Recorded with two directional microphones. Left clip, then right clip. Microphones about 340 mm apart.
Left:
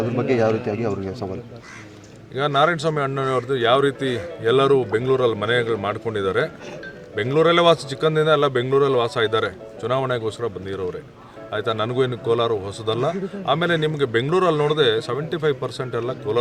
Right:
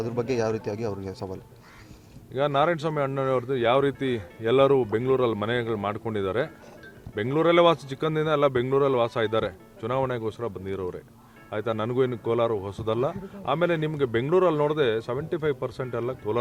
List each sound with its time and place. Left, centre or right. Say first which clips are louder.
0.0 s speech: left 7 dB; centre
2.3 s a man's voice: left 4 dB; right